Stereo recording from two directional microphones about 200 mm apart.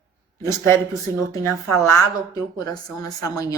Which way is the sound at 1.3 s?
15° left (ahead or behind).